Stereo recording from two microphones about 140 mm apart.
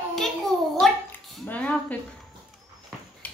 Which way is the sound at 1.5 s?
10° left (ahead or behind).